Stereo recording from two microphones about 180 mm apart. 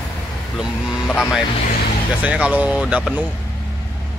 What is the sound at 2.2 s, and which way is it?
Speech, 5° right (ahead or behind).